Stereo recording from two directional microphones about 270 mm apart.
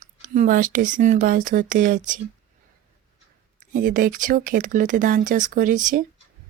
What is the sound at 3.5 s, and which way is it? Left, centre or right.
Speech, right.